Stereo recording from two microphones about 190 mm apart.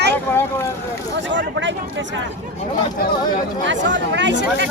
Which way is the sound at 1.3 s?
75° right (ahead or behind).